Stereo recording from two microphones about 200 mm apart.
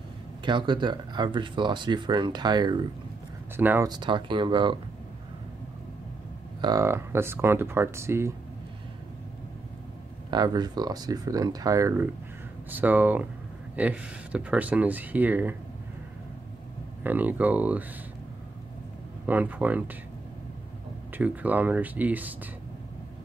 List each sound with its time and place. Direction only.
0.5 s speech: 20° right (ahead or behind)
3.5 s speech: 10° right (ahead or behind)
3.9 s speech: 25° right (ahead or behind)
6.6 s speech: 15° right (ahead or behind)
10.3 s speech: 20° right (ahead or behind)
17.0 s speech: 10° right (ahead or behind)
19.2 s speech: 10° right (ahead or behind)
21.2 s speech: 10° right (ahead or behind)